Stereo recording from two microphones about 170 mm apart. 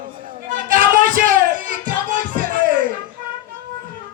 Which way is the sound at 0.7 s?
55° right (ahead or behind).